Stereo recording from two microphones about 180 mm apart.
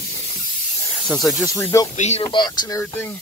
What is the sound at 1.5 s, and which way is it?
Speech, 15° left (ahead or behind).